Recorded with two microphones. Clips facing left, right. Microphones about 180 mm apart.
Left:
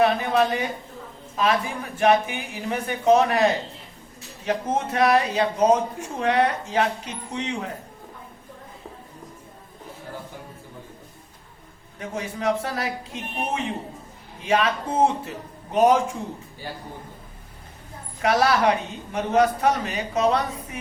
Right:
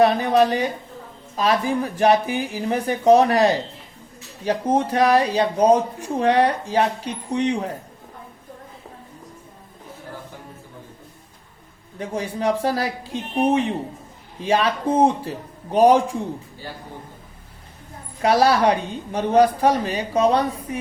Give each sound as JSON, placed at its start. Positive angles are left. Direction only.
{"t": 0.0, "sound": "speech", "side_deg": -35}
{"t": 11.9, "sound": "speech", "side_deg": -35}
{"t": 18.2, "sound": "speech", "side_deg": -30}